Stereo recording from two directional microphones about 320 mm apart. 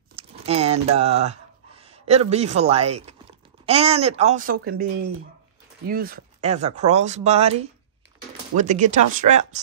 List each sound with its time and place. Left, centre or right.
0.1 s a sound: centre
3.6 s speech: centre
5.9 s speech: right